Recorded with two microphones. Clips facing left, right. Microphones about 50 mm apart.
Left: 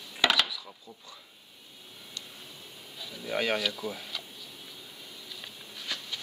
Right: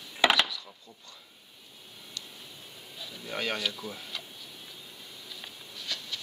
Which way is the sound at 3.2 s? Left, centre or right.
Centre.